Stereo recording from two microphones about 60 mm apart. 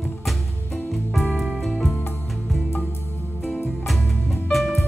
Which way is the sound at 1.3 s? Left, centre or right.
Centre.